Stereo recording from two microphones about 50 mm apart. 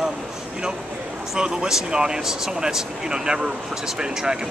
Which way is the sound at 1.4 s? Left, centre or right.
Centre.